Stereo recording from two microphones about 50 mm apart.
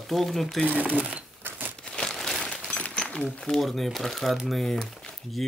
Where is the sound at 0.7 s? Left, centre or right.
Right.